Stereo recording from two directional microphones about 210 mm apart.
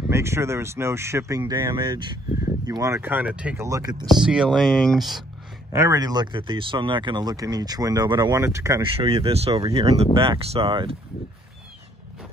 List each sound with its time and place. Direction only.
0.1 s speech: 15° right (ahead or behind)
4.1 s speech: 5° right (ahead or behind)
5.7 s speech: 15° right (ahead or behind)
8.9 s speech: 25° right (ahead or behind)